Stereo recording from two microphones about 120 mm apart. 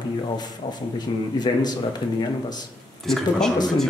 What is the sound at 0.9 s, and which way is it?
Speech, 35° left (ahead or behind).